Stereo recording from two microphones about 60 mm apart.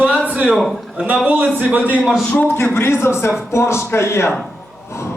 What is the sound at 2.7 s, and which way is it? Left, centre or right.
Speech, left.